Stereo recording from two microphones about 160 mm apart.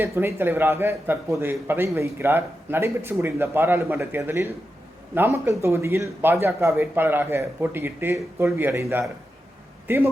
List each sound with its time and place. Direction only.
0.0 s speech: 15° right (ahead or behind)